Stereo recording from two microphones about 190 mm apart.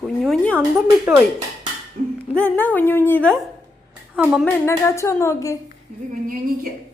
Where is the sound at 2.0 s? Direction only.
45° right (ahead or behind).